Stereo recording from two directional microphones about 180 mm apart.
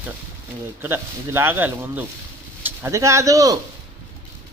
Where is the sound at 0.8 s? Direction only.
15° right (ahead or behind).